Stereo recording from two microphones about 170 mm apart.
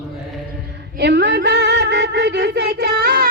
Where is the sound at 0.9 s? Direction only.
85° right.